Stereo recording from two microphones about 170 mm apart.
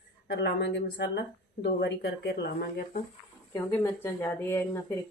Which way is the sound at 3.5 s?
15° left (ahead or behind).